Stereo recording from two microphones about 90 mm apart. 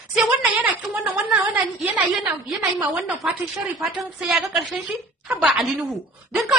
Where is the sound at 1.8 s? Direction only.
20° right (ahead or behind).